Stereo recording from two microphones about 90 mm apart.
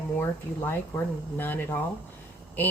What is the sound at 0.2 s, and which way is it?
Speech, 25° left (ahead or behind).